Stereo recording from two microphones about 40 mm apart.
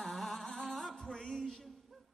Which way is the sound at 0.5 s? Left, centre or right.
Centre.